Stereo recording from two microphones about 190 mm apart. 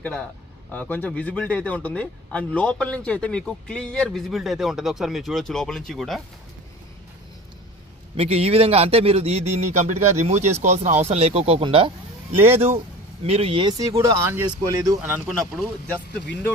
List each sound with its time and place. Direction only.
0.0 s a man's voice: 5° left (ahead or behind)
8.2 s a man's voice: 30° right (ahead or behind)
15.0 s a man's voice: 10° right (ahead or behind)